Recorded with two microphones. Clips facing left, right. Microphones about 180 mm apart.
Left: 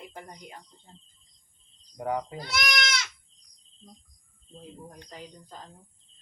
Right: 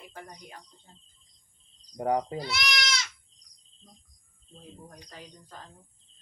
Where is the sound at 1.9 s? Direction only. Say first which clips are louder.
Right 3 dB; 35° right (ahead or behind).